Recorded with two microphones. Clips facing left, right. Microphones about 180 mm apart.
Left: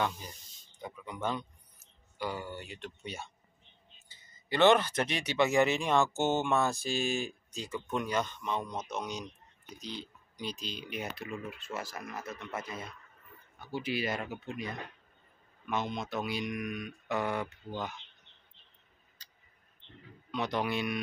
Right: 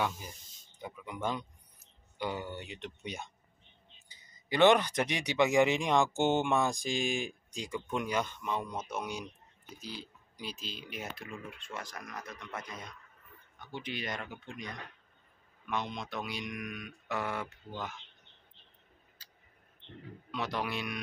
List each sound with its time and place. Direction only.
0.7 s a sound: 10° right (ahead or behind)
2.1 s speech: 20° right (ahead or behind); by 17.9 s centre (ahead or behind)
19.2 s tick: 10° right (ahead or behind)
20.2 s speech: centre (ahead or behind)